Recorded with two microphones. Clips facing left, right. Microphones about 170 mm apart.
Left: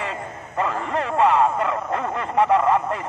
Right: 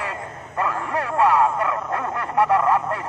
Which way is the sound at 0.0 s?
20° left (ahead or behind).